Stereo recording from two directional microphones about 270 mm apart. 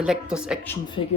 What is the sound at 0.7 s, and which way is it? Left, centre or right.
Speech, centre.